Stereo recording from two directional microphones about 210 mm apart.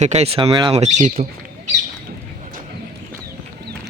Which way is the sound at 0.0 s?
30° right (ahead or behind).